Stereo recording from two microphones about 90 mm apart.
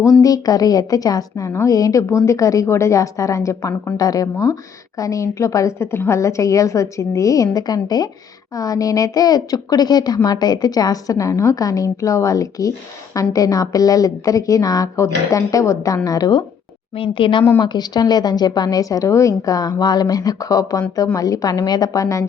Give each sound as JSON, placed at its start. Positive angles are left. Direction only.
{"t": 0.0, "sound": "a woman's voice", "side_deg": 40}
{"t": 16.9, "sound": "a woman's voice", "side_deg": 80}
{"t": 17.6, "sound": "a woman's voice", "side_deg": 55}
{"t": 19.5, "sound": "a woman's voice", "side_deg": 45}